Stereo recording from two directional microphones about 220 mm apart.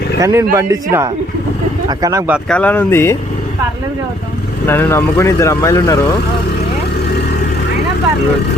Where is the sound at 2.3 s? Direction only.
5° left (ahead or behind).